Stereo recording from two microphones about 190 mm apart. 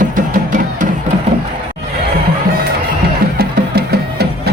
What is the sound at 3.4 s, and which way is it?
Music, 55° right (ahead or behind).